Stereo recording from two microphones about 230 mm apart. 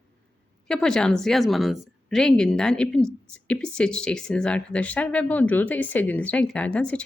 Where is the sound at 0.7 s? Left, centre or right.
Centre.